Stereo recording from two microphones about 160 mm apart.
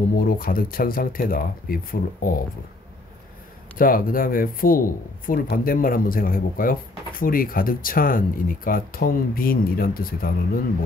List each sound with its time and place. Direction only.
0.1 s speech: 60° left (ahead or behind)
3.7 s speech: 60° left (ahead or behind)